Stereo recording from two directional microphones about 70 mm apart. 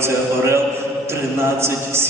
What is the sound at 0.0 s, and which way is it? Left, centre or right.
A man's voice, right.